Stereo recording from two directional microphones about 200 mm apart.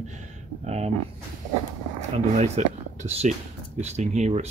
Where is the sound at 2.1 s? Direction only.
35° right (ahead or behind).